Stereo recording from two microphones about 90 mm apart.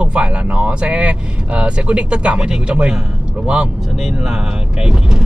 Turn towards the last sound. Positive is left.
turn(degrees=-10)  # may be behind; listen again after turning